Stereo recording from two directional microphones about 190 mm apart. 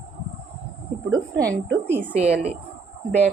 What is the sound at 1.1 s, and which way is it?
Speech, 15° right (ahead or behind).